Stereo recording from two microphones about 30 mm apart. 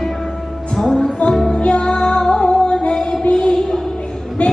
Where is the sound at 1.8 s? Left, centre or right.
Left.